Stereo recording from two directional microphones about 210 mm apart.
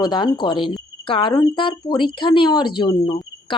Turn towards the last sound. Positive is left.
turn(degrees=25)  # may be behind; listen again after turning